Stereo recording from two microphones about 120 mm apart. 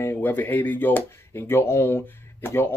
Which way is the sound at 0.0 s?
15° left (ahead or behind).